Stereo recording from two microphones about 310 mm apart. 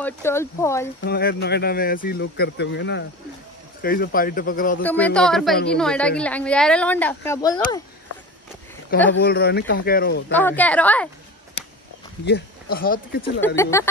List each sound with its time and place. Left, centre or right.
0.0 s speech: centre
1.0 s speech: left
4.8 s a woman's voice: centre
9.1 s speech: left
10.3 s a woman's voice: centre
12.3 s speech: left
13.6 s speech: centre